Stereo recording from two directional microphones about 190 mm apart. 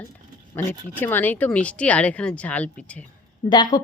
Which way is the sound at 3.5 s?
20° left (ahead or behind).